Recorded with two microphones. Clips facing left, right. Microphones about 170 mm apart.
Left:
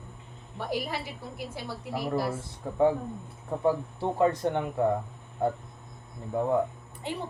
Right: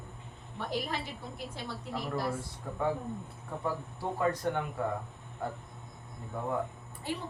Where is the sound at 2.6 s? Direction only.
25° left (ahead or behind).